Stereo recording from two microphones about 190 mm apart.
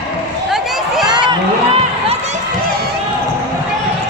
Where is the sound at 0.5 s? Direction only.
Centre (ahead or behind).